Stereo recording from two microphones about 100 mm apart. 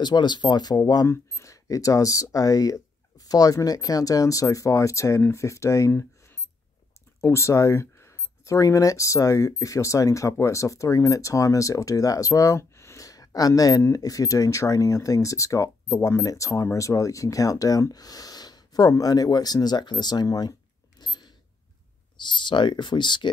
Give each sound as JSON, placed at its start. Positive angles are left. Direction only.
{"t": 0.0, "sound": "speech", "side_deg": 45}
{"t": 1.0, "sound": "speech", "side_deg": 25}
{"t": 21.0, "sound": "a sound", "side_deg": 45}
{"t": 22.1, "sound": "speech", "side_deg": 50}